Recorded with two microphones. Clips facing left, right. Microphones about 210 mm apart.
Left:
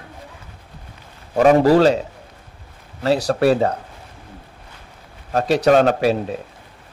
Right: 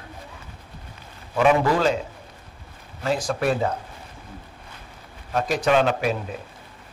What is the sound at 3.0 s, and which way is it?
Speech, 35° left (ahead or behind).